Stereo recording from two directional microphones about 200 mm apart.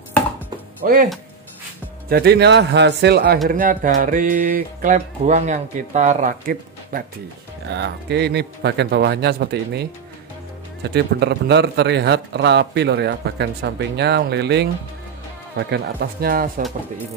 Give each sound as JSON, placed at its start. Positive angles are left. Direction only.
{"t": 0.8, "sound": "speech", "side_deg": -45}
{"t": 2.0, "sound": "a man's voice", "side_deg": -55}
{"t": 3.4, "sound": "a man's voice", "side_deg": -45}